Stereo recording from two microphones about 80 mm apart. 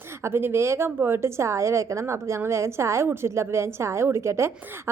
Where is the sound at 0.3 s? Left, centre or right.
Right.